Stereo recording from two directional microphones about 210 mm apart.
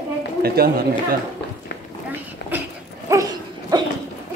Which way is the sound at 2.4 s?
55° left (ahead or behind).